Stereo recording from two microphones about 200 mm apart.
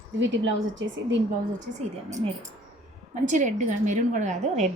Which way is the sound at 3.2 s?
40° right (ahead or behind).